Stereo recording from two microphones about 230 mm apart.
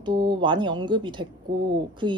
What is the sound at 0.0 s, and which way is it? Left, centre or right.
A woman's voice, centre.